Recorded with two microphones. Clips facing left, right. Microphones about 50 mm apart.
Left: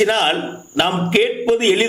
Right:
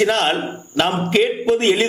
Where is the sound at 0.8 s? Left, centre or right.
Centre.